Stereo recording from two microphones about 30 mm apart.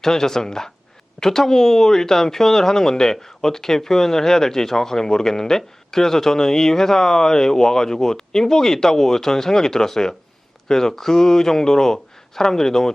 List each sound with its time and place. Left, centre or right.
0.0 s speech: centre